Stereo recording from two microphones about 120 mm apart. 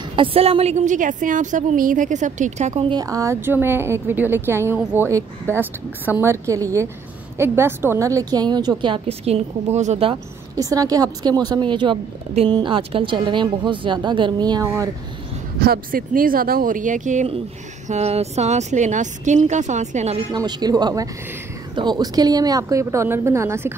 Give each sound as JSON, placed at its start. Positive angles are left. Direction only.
{"t": 0.1, "sound": "a woman's voice", "side_deg": -50}
{"t": 2.8, "sound": "a woman's voice", "side_deg": -40}
{"t": 3.1, "sound": "a woman's voice", "side_deg": -25}
{"t": 9.0, "sound": "a woman's voice", "side_deg": -60}
{"t": 10.5, "sound": "a woman's voice", "side_deg": -30}
{"t": 16.6, "sound": "a woman's voice", "side_deg": -90}
{"t": 17.8, "sound": "speech", "side_deg": -65}
{"t": 20.3, "sound": "a woman's voice", "side_deg": -35}